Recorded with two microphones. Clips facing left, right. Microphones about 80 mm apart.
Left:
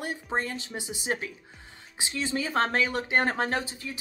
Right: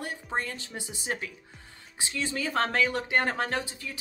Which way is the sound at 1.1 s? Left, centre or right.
Left.